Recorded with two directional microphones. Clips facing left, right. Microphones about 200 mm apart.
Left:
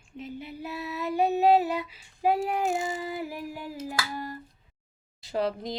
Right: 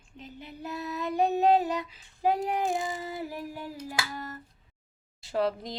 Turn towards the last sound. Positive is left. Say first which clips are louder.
# even
turn(degrees=0)  # may be behind; listen again after turning